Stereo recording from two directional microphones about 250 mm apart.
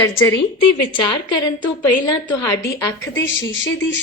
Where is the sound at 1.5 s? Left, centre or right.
Left.